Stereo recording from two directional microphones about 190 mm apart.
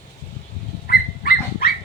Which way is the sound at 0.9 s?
50° left (ahead or behind).